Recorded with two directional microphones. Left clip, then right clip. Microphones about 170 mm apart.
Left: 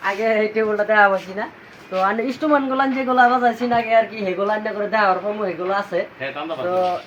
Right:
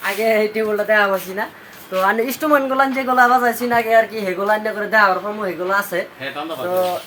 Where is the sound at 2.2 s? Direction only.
20° right (ahead or behind).